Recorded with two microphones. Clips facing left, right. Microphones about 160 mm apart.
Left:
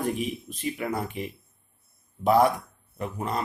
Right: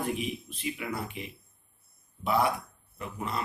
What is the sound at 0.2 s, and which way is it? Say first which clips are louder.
Speech: left 4 dB; 45° left (ahead or behind).